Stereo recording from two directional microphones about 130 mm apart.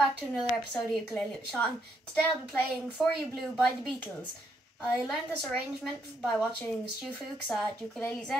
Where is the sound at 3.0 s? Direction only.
Centre (ahead or behind).